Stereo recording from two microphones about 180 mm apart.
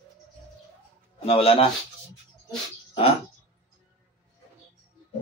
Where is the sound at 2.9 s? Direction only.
30° left (ahead or behind).